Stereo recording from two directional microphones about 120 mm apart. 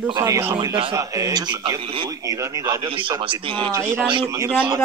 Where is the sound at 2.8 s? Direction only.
45° right (ahead or behind).